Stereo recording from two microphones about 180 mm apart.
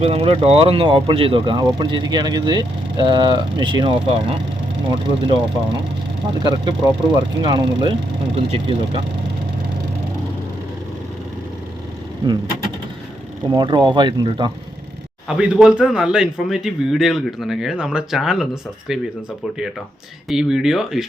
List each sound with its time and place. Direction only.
0.0 s speech: 35° right (ahead or behind)
13.5 s speech: 25° right (ahead or behind)
15.4 s speech: 5° right (ahead or behind)
20.2 s speech: 5° right (ahead or behind)